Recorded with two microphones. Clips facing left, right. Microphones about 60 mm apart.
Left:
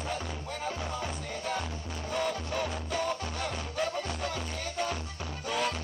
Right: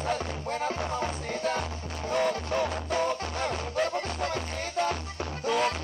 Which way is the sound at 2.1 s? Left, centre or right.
Right.